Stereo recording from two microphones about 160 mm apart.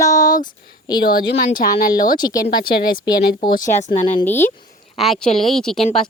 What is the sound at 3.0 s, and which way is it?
Speech, 90° left.